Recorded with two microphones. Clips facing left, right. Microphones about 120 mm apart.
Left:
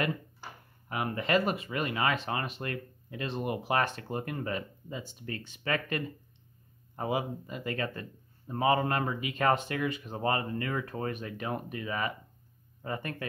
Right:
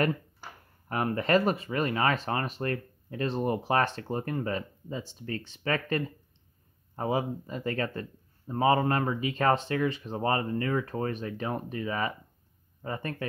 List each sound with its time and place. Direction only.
0.8 s speech: 40° right (ahead or behind)